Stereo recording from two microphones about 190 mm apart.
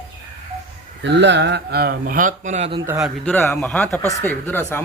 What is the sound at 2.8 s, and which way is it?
Speech, 15° right (ahead or behind).